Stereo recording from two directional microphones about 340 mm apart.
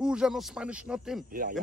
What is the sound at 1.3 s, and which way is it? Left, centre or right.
Speech, right.